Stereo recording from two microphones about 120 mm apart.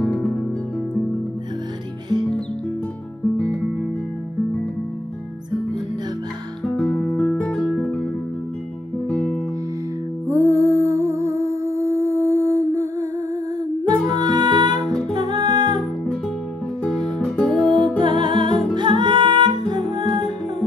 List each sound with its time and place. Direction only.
0.0 s music: 5° left (ahead or behind)
6.6 s guitar: 10° left (ahead or behind)
9.1 s music: 10° left (ahead or behind)
10.2 s music: 25° right (ahead or behind)
14.1 s music: 35° right (ahead or behind)
16.8 s music: 5° left (ahead or behind)
17.9 s music: 40° right (ahead or behind)